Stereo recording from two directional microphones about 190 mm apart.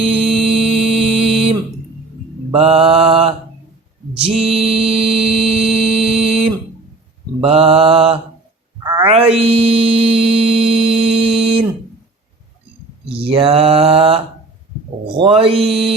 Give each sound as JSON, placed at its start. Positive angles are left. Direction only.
{"t": 0.0, "sound": "music", "side_deg": -30}
{"t": 2.5, "sound": "mantra", "side_deg": -30}
{"t": 8.8, "sound": "a sound", "side_deg": -20}
{"t": 9.4, "sound": "mantra", "side_deg": -30}
{"t": 13.2, "sound": "mantra", "side_deg": -30}
{"t": 15.2, "sound": "mantra", "side_deg": -30}